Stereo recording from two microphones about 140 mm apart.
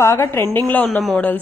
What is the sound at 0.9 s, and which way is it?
Speech, centre (ahead or behind).